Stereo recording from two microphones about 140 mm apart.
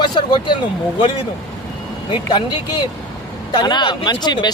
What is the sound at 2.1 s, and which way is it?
Speech, 35° left (ahead or behind).